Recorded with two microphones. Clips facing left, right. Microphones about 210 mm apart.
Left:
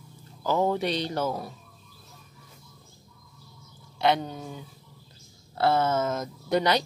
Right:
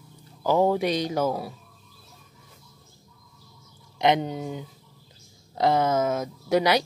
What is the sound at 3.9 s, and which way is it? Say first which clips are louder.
Speech: right 3 dB; 20° right (ahead or behind).